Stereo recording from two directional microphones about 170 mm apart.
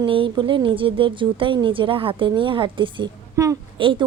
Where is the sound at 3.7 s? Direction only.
30° right (ahead or behind).